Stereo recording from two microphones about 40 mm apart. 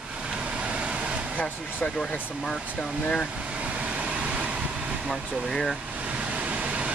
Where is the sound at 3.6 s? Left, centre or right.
Right.